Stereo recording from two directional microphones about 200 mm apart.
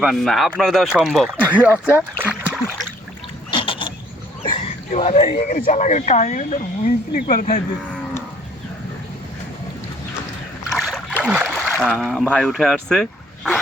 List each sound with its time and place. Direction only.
0.0 s speech: centre (ahead or behind)
2.0 s splash: 5° right (ahead or behind)
3.5 s boat: 25° left (ahead or behind)
4.4 s a sound: 25° left (ahead or behind)
5.6 s a woman's voice: 35° left (ahead or behind)
10.8 s a sound: centre (ahead or behind)
11.8 s speech: centre (ahead or behind)